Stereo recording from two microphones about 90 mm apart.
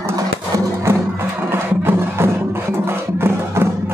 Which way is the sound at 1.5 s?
25° right (ahead or behind).